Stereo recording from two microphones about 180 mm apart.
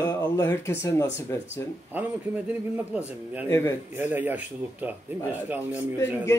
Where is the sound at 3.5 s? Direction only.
15° left (ahead or behind).